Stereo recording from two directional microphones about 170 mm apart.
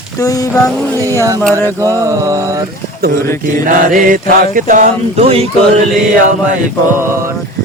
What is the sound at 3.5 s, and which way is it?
Mantra, 55° right (ahead or behind).